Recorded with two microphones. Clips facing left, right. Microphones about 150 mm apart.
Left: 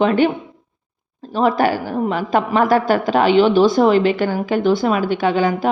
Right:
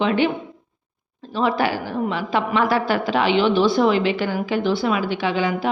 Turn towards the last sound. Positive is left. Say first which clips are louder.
# left 5 dB
turn(degrees=45)  # may be behind; listen again after turning